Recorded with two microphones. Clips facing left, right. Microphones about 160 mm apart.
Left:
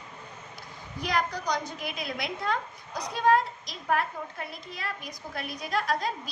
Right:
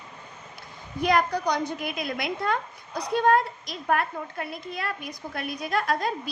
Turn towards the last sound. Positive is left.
turn(degrees=-55)  # may be behind; listen again after turning